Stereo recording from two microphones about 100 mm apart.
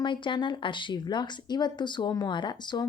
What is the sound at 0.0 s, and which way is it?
Speech, 50° left (ahead or behind).